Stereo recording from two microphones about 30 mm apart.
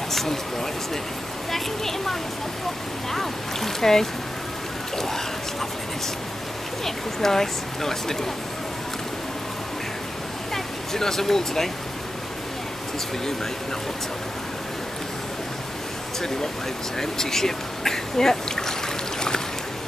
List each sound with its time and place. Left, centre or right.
0.1 s a sound: centre
1.5 s speech: centre
6.8 s speech: centre
10.5 s speech: centre
17.0 s speech: centre